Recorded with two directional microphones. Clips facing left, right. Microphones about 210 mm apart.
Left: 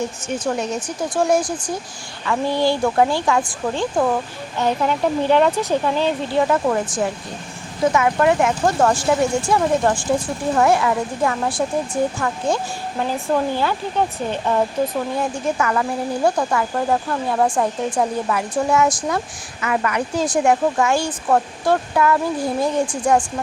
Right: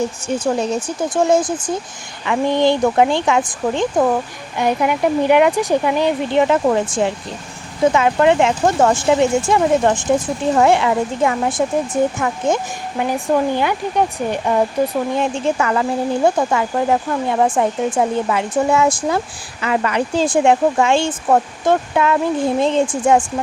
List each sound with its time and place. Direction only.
0.3 s speech: 30° right (ahead or behind); by 14.6 s 15° right (ahead or behind)
15.1 s speech: 25° right (ahead or behind)